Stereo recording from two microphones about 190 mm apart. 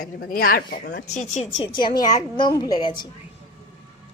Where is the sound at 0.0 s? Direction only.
50° left (ahead or behind).